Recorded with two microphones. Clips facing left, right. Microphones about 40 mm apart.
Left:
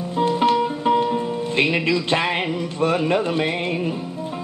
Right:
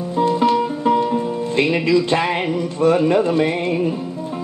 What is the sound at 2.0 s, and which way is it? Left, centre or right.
Speech, centre.